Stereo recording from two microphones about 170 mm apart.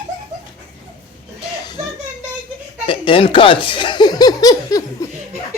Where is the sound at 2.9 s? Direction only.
30° left (ahead or behind).